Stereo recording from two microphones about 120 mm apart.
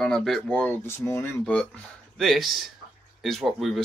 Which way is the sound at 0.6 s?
20° left (ahead or behind).